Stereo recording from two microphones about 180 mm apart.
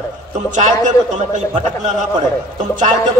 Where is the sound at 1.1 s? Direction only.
40° right (ahead or behind).